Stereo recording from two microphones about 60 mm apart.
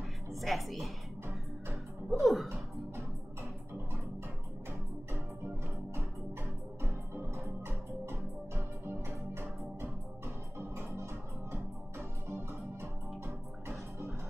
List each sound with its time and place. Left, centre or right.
0.3 s a woman's voice: centre
2.0 s speech: centre
7.4 s music: right